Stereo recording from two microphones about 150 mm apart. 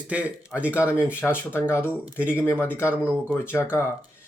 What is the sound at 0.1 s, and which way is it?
Speech, 10° right (ahead or behind).